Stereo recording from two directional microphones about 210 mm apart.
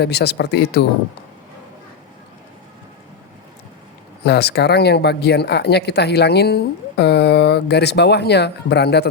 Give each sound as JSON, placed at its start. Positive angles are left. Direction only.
{"t": 0.0, "sound": "speech", "side_deg": 50}
{"t": 4.2, "sound": "speech", "side_deg": 50}